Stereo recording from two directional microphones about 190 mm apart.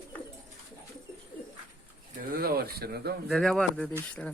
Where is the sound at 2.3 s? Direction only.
50° right (ahead or behind).